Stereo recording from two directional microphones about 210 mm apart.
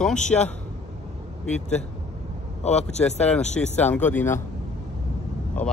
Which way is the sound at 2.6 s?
30° left (ahead or behind).